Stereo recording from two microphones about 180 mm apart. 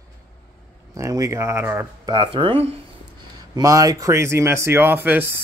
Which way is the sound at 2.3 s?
30° right (ahead or behind).